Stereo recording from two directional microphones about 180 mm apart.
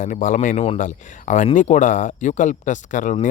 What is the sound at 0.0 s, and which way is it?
Speech, 45° left (ahead or behind).